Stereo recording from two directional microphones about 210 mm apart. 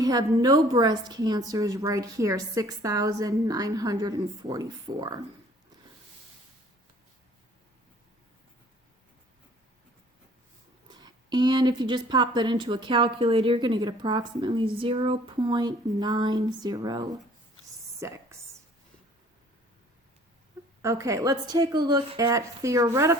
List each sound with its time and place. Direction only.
0.0 s a woman's voice: 15° right (ahead or behind)
10.8 s a woman's voice: 20° right (ahead or behind)
20.8 s a woman's voice: 15° right (ahead or behind)